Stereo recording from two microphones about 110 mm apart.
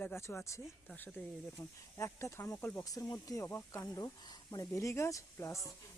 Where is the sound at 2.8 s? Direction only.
35° left (ahead or behind).